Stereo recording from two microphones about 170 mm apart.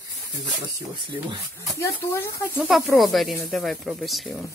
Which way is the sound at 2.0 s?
15° left (ahead or behind).